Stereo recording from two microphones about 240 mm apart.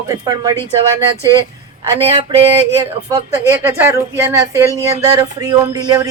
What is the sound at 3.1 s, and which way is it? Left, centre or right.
Speech, centre.